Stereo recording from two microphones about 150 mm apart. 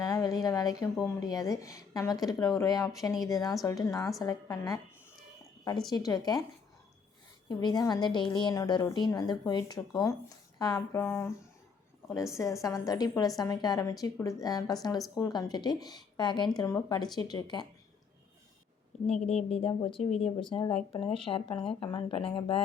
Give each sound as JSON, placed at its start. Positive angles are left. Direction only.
{"t": 0.0, "sound": "a sound", "side_deg": 25}
{"t": 0.4, "sound": "a woman's voice", "side_deg": 25}
{"t": 5.9, "sound": "a woman's voice", "side_deg": 25}
{"t": 7.4, "sound": "a woman's voice", "side_deg": 25}
{"t": 12.6, "sound": "a woman's voice", "side_deg": 25}
{"t": 19.5, "sound": "speech", "side_deg": 40}